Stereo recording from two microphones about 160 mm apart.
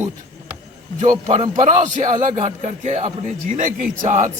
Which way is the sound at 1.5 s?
50° right (ahead or behind).